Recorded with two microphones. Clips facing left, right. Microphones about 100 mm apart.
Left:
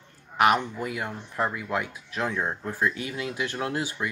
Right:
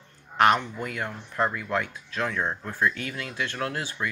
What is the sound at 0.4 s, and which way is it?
Speech, 5° left (ahead or behind).